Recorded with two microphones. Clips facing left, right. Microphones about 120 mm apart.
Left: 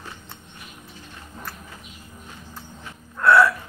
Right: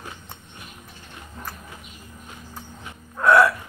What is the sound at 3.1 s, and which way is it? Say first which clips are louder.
Hiccup: even; 15° right (ahead or behind).